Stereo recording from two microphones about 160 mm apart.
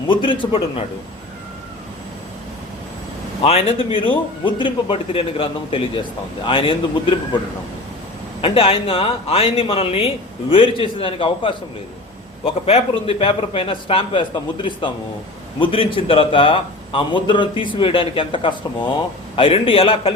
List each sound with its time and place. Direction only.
0.1 s a man's voice: 30° left (ahead or behind)
3.4 s a man's voice: 35° left (ahead or behind)
8.4 s a man's voice: 35° left (ahead or behind)